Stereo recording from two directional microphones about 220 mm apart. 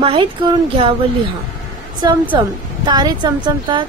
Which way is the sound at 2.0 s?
20° right (ahead or behind).